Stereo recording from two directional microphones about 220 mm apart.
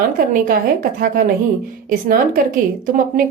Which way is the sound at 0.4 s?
40° right (ahead or behind).